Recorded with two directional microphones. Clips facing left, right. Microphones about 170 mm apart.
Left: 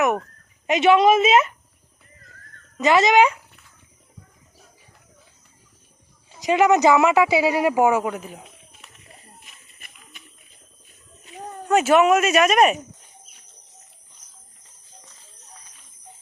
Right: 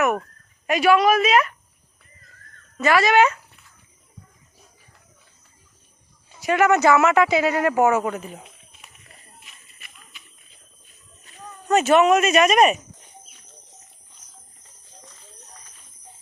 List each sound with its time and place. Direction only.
0.7 s a woman's voice: 25° left (ahead or behind)
2.7 s speech: 20° left (ahead or behind)
6.4 s speech: 15° left (ahead or behind)
9.4 s a sound: 50° left (ahead or behind)
11.7 s speech: 10° left (ahead or behind)